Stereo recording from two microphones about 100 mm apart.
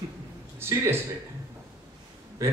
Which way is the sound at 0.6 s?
25° right (ahead or behind).